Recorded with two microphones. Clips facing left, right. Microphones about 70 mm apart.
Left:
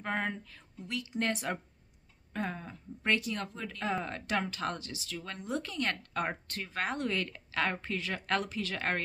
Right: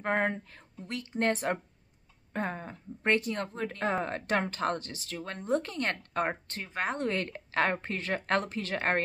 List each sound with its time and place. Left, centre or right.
0.0 s speech: right